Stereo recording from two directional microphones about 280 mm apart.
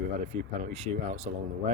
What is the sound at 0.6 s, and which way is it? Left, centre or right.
Speech, right.